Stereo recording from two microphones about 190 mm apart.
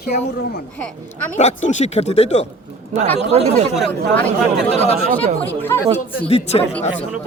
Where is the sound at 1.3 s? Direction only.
40° left (ahead or behind).